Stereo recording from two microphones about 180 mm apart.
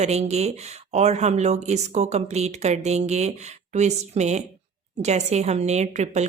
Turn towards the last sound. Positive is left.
turn(degrees=-40)  # may be behind; listen again after turning